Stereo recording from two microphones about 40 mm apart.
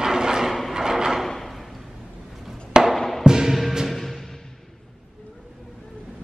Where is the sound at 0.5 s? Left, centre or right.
Centre.